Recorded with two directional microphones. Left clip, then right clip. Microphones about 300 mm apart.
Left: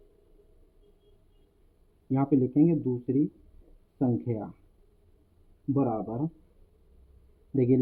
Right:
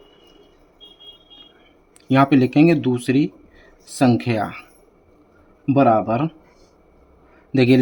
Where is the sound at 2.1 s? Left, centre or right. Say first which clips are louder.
Right 11 dB; right.